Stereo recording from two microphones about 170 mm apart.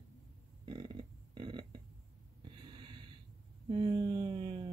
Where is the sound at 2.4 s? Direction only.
25° right (ahead or behind).